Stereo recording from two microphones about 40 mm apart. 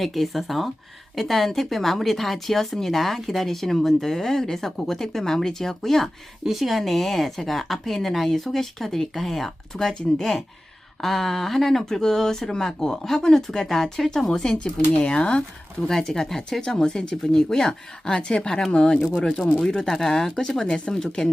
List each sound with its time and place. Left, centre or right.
0.0 s a woman's voice: centre
6.4 s a woman's voice: centre
14.6 s speech: left
15.9 s speech: centre
19.2 s speech: centre